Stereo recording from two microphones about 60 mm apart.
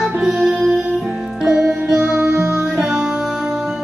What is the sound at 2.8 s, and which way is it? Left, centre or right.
Music, centre.